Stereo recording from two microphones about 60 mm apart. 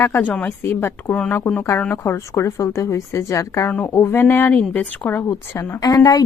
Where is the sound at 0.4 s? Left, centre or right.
Left.